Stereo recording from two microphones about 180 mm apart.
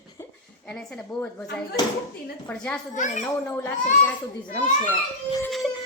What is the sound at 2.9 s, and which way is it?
Speech, 45° left (ahead or behind).